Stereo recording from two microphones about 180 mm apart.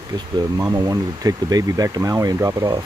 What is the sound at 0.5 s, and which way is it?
Speech, 20° right (ahead or behind).